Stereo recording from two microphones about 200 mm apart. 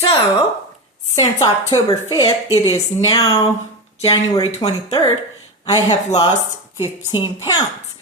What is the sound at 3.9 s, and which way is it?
Speech, 30° left (ahead or behind).